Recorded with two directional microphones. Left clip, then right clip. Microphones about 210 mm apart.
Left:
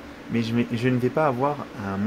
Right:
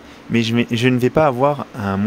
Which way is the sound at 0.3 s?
45° right (ahead or behind).